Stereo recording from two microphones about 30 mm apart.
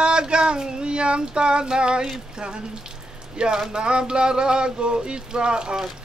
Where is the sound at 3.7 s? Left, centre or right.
Right.